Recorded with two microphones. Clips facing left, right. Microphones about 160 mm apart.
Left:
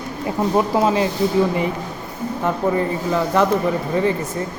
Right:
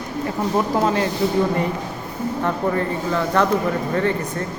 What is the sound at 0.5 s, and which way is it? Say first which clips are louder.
Speech: left 2 dB; 15° left (ahead or behind).